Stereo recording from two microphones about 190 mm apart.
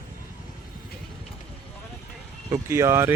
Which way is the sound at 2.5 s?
15° right (ahead or behind).